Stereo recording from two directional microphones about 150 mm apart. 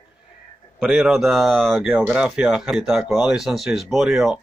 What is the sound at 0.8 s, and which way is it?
Speech, 5° right (ahead or behind).